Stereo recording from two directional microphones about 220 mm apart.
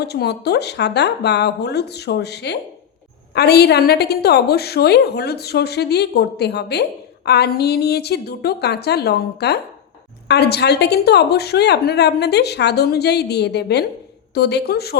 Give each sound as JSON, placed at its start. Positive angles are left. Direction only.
{"t": 0.0, "sound": "a woman's voice", "side_deg": 50}